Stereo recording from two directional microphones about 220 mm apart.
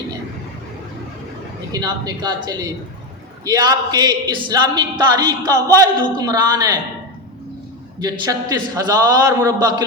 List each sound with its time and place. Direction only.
1.7 s speech: 20° right (ahead or behind)
7.9 s a man's voice: 20° right (ahead or behind)